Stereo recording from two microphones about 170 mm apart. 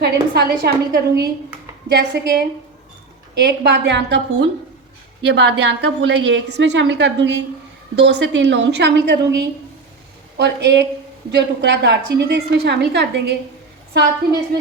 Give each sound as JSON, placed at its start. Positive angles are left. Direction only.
{"t": 0.0, "sound": "a woman's voice", "side_deg": -70}